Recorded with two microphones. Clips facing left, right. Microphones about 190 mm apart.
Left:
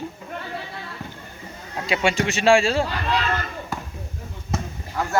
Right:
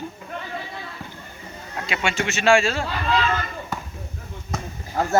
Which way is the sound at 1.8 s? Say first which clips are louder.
Left 4 dB; 35° left (ahead or behind).